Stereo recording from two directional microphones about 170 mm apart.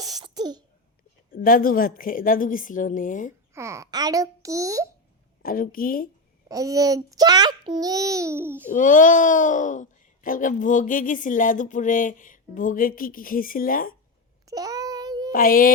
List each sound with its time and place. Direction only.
0.0 s throat clearing: 20° right (ahead or behind)
1.5 s speech: 55° left (ahead or behind)
3.5 s a child's voice: 15° right (ahead or behind)
5.4 s a woman's voice: 55° left (ahead or behind)
6.5 s a child's voice: 20° right (ahead or behind)
8.7 s speech: 50° left (ahead or behind)
14.4 s child singing: 20° right (ahead or behind)
15.3 s a woman's voice: 55° left (ahead or behind)